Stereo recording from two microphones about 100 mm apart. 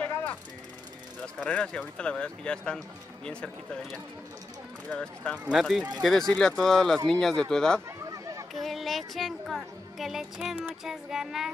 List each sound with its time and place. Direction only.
0.0 s vehicle: 10° left (ahead or behind)
1.2 s speech: 10° left (ahead or behind)
5.6 s speech: centre (ahead or behind)
8.1 s chatter: 35° right (ahead or behind)
8.5 s speech: centre (ahead or behind)